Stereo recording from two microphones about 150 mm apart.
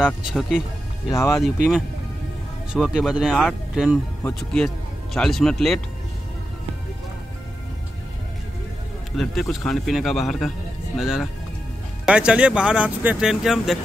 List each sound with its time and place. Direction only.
0.0 s speech: 5° right (ahead or behind)
1.1 s speech: 20° left (ahead or behind)
2.7 s speech: 5° right (ahead or behind)
9.1 s speech: centre (ahead or behind)